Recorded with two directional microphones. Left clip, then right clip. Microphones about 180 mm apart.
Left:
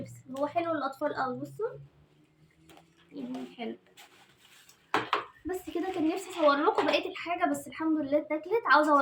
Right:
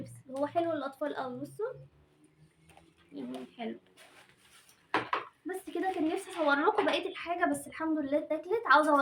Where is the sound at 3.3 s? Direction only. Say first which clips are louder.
Left 2 dB; 25° right (ahead or behind).